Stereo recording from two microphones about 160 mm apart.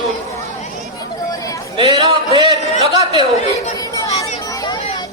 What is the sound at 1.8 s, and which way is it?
Speech, 35° right (ahead or behind).